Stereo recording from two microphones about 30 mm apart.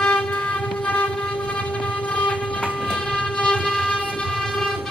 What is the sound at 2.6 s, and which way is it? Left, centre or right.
Train, left.